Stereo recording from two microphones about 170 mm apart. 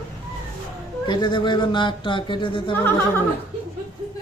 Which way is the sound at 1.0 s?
25° left (ahead or behind).